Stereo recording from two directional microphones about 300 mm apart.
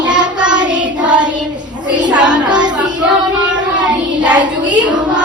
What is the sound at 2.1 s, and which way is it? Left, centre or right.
Child singing, centre.